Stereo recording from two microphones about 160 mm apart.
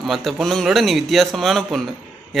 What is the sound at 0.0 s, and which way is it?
A man's voice, centre (ahead or behind).